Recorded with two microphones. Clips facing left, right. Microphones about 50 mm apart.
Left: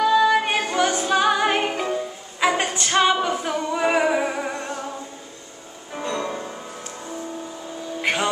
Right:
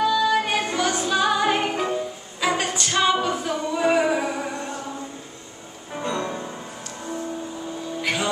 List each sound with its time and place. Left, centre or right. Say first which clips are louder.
0.0 s music: left 3 dB; left
2.9 s a capella: left 2 dB; left
3.3 s music: left 1 dB; centre
5.9 s music: even; centre
8.0 s a sound: left 3 dB; left